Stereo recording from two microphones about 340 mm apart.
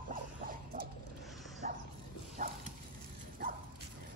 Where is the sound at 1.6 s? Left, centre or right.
Right.